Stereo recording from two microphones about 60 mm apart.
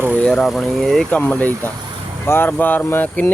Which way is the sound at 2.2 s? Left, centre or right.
Left.